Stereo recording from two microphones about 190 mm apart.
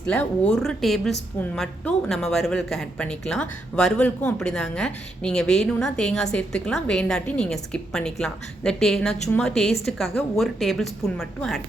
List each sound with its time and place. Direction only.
0.0 s speech: 5° left (ahead or behind)